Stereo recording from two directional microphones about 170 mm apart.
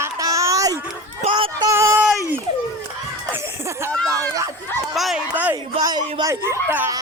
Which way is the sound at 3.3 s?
15° right (ahead or behind).